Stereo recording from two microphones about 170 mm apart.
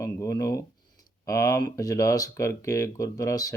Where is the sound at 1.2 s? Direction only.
20° left (ahead or behind).